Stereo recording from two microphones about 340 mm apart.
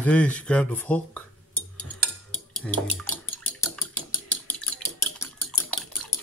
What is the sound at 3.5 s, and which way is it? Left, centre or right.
Dishes, centre.